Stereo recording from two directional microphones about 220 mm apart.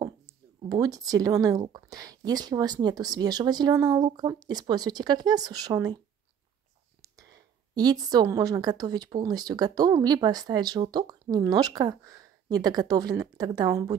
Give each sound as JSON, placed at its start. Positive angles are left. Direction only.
{"t": 0.7, "sound": "speech", "side_deg": -15}
{"t": 7.7, "sound": "speech", "side_deg": -20}